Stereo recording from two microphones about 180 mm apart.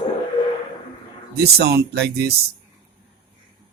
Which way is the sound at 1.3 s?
60° right (ahead or behind).